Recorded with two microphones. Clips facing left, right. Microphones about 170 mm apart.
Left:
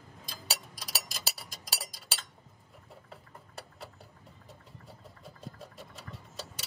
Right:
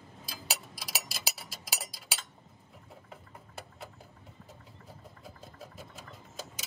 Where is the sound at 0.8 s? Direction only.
5° right (ahead or behind).